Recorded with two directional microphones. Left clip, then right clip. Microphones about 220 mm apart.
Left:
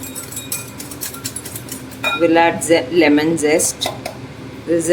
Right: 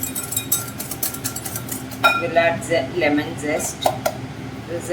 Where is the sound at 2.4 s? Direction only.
45° left (ahead or behind).